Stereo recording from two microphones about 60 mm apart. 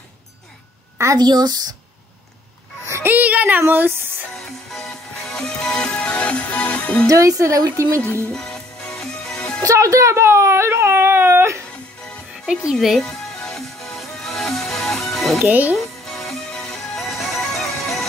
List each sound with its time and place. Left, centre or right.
0.9 s a woman's voice: right
3.1 s speech: right
4.3 s music: centre; by 7.1 s left
7.1 s a woman's voice: right
8.3 s music: centre
9.6 s speech: right
13.0 s music: centre
15.3 s speech: right
15.7 s music: centre